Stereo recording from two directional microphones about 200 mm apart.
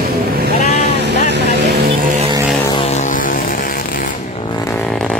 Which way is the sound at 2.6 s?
30° left (ahead or behind).